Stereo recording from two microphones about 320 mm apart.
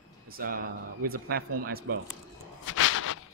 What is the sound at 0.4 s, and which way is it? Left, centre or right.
Speech, right.